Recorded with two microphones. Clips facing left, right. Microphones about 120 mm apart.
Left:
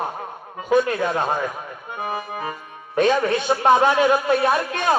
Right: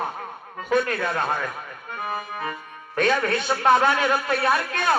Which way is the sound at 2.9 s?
20° left (ahead or behind).